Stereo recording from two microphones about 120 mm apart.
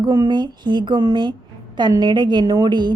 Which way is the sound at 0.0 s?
35° right (ahead or behind).